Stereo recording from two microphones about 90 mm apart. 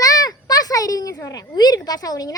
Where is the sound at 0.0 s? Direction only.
45° left (ahead or behind).